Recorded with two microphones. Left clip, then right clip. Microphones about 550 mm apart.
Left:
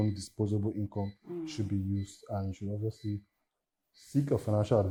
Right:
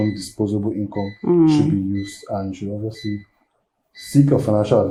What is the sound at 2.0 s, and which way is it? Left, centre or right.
Speech, left.